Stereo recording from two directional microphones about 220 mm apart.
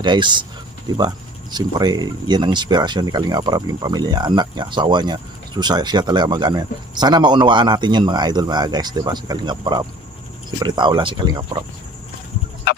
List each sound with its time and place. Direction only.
0.0 s speech: 20° right (ahead or behind)